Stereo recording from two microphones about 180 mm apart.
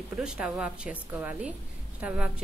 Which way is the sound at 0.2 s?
5° right (ahead or behind).